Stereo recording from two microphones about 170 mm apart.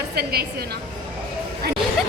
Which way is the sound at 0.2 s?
70° right (ahead or behind).